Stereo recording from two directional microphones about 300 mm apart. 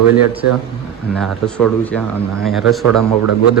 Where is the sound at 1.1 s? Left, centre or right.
Centre.